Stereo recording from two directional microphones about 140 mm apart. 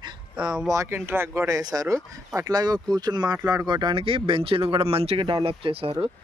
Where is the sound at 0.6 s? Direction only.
20° right (ahead or behind); by 5.9 s 40° right (ahead or behind).